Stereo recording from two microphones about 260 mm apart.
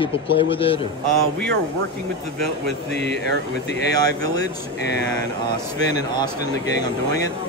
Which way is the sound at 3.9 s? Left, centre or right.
Centre.